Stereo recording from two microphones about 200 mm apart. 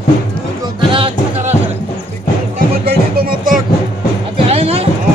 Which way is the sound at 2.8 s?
50° right (ahead or behind).